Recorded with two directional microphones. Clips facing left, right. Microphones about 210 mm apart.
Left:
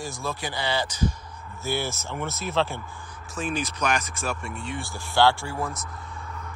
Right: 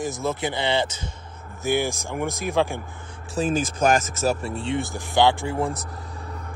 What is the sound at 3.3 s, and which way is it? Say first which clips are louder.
Speech: right 6 dB; 40° right (ahead or behind).